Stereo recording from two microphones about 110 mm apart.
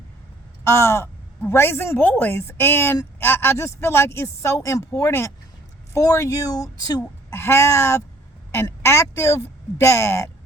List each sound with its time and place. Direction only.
0.6 s a woman's voice: 25° left (ahead or behind)